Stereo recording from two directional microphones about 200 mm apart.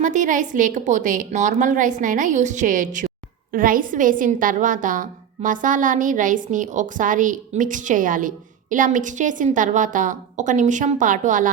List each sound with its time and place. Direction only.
0.0 s a woman's voice: 40° right (ahead or behind)